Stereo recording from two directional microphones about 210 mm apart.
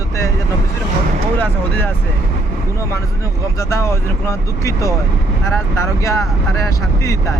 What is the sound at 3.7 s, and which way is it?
Speech, 15° left (ahead or behind).